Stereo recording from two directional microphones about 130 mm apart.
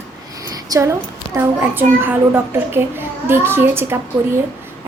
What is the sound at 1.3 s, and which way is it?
A child's voice, 15° right (ahead or behind).